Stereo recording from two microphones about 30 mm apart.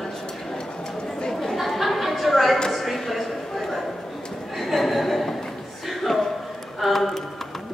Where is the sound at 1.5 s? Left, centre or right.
Centre.